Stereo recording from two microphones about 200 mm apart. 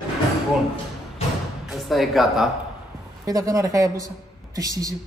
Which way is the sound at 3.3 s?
15° right (ahead or behind).